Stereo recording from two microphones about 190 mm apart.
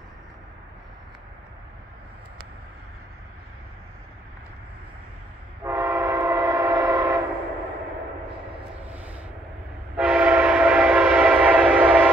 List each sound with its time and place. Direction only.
5.6 s train: 15° right (ahead or behind)
9.9 s train: 5° right (ahead or behind)